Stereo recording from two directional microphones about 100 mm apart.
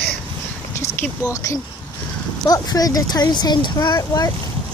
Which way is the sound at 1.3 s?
30° left (ahead or behind).